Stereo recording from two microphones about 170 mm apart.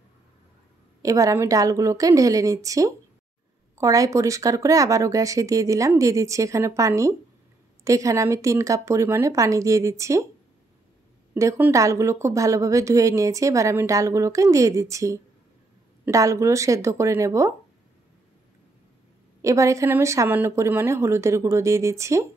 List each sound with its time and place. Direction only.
1.0 s a woman's voice: 20° right (ahead or behind)
11.3 s a woman's voice: 15° right (ahead or behind)
19.4 s speech: 20° right (ahead or behind)